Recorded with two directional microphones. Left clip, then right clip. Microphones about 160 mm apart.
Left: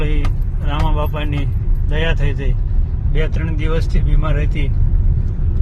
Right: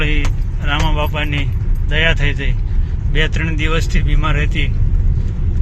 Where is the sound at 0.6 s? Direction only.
15° left (ahead or behind).